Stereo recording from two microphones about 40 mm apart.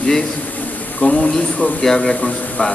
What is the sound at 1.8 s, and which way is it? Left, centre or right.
Speech, centre.